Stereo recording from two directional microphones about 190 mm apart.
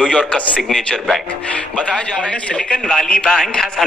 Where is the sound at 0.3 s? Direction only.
5° left (ahead or behind).